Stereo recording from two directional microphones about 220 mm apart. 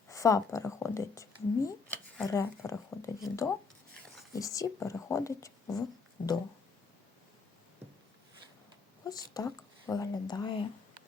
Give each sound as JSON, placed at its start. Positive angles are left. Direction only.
{"t": 0.1, "sound": "speech", "side_deg": 15}
{"t": 6.2, "sound": "music", "side_deg": 40}
{"t": 9.0, "sound": "speech", "side_deg": 15}